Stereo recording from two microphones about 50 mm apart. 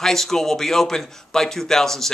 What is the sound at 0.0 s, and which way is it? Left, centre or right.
Speech, centre.